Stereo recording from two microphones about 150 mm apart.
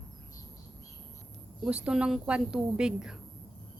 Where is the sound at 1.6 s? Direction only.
10° right (ahead or behind).